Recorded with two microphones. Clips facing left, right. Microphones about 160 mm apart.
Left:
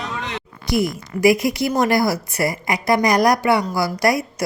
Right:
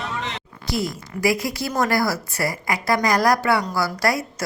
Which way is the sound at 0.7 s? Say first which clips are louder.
Left 5 dB; 15° left (ahead or behind).